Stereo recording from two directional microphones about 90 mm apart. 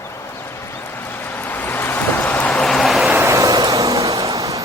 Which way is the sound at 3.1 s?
30° right (ahead or behind).